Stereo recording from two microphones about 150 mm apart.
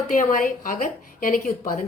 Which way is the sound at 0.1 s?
65° left (ahead or behind).